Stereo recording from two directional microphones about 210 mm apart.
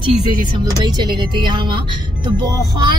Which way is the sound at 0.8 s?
20° right (ahead or behind).